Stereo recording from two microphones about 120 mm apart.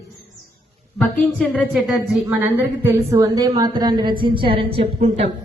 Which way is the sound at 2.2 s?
20° right (ahead or behind).